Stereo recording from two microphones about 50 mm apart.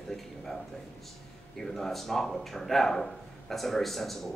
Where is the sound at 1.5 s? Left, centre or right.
Centre.